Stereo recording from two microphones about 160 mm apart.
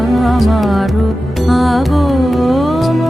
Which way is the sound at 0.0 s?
Centre (ahead or behind).